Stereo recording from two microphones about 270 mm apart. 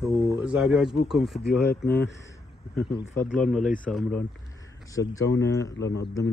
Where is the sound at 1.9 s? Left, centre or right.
Centre.